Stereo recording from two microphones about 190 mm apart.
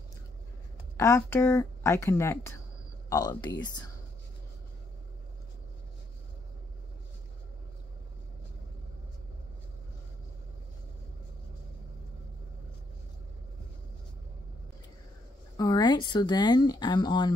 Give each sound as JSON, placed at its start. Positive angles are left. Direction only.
{"t": 0.9, "sound": "speech", "side_deg": 15}
{"t": 15.5, "sound": "speech", "side_deg": 20}